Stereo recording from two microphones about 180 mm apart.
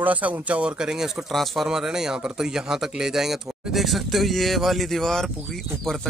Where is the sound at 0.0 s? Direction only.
10° right (ahead or behind).